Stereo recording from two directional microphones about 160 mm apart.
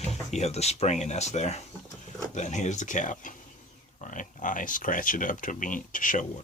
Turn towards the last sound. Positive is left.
turn(degrees=55)  # may be behind; listen again after turning